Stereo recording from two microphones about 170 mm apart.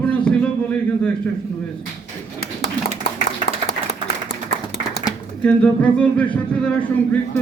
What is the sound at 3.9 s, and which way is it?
Clapping, 70° left (ahead or behind).